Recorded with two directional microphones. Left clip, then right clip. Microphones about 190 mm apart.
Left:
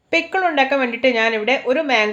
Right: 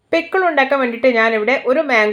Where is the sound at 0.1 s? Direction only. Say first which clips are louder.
Right 2 dB; 15° right (ahead or behind).